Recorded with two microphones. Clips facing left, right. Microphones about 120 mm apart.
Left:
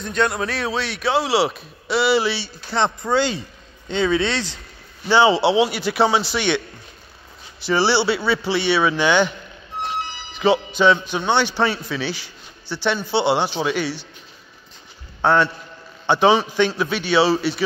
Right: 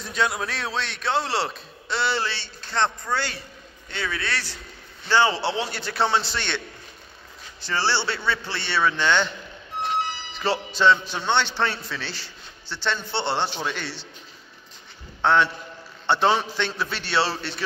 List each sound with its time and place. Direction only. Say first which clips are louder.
0.0 s a man's voice: left 4 dB; centre (ahead or behind)
7.6 s a man's voice: left 7 dB; 10° left (ahead or behind)
10.4 s a man's voice: left 4 dB; centre (ahead or behind)
15.2 s a man's voice: left 3 dB; 5° left (ahead or behind)